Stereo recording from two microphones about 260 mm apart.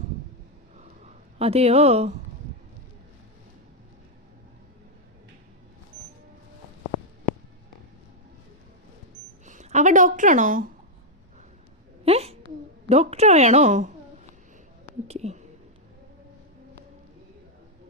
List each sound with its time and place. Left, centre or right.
1.4 s a woman's voice: right
9.5 s a woman's voice: right
12.0 s a sound: right
12.9 s a woman's voice: right
15.0 s speech: right